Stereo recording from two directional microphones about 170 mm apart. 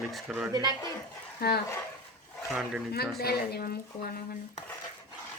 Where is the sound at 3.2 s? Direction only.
70° left (ahead or behind).